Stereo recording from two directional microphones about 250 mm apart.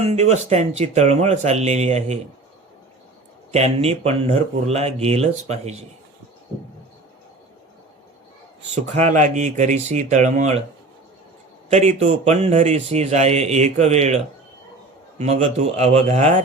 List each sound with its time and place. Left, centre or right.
0.1 s speech: right
3.5 s speech: right
8.7 s speech: right
11.7 s speech: right
15.2 s speech: right